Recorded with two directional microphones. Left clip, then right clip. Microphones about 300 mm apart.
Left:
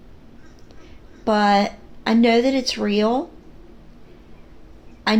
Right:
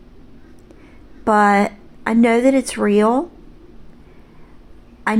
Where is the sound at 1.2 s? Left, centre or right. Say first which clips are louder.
Right 3 dB; right.